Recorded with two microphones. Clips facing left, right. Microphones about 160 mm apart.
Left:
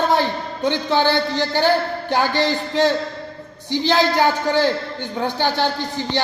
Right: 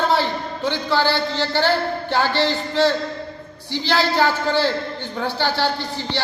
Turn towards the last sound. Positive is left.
turn(degrees=15)  # may be behind; listen again after turning